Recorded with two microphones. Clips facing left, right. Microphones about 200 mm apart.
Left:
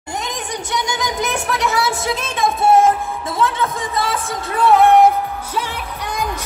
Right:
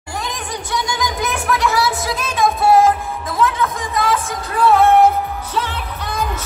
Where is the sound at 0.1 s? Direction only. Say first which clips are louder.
Left 1 dB; 20° left (ahead or behind).